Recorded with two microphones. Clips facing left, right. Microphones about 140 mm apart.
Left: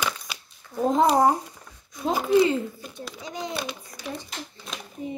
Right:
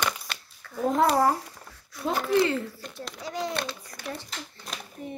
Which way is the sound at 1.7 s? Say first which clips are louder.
Left 3 dB; 20° left (ahead or behind).